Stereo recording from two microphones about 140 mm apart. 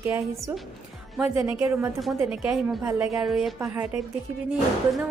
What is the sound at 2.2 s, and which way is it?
A woman's voice, 5° right (ahead or behind).